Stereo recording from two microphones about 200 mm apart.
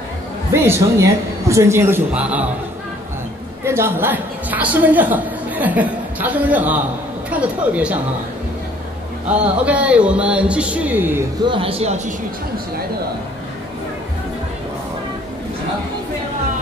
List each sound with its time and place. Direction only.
0.5 s a man's voice: 15° right (ahead or behind)
3.6 s a woman's voice: 15° right (ahead or behind)
9.3 s a man's voice: 5° right (ahead or behind)
11.4 s speech: 25° right (ahead or behind)